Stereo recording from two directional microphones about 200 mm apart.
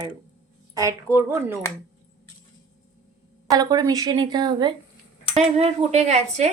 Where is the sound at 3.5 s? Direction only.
20° right (ahead or behind).